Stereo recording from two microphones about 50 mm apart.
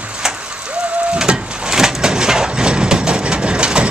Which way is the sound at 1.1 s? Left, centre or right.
Centre.